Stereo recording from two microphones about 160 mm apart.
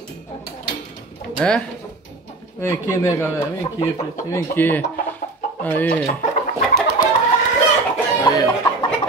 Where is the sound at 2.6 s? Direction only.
15° left (ahead or behind).